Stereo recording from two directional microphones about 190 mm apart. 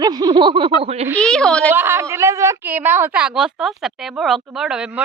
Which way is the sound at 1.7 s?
10° right (ahead or behind).